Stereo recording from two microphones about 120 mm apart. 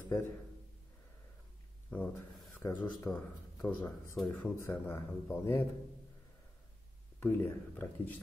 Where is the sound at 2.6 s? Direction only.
25° left (ahead or behind).